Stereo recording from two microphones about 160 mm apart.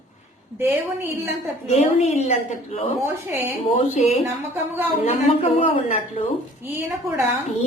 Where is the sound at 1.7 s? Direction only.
45° left (ahead or behind).